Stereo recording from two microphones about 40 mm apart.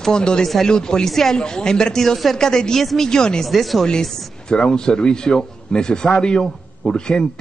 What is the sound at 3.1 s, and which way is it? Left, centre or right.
Speech, centre.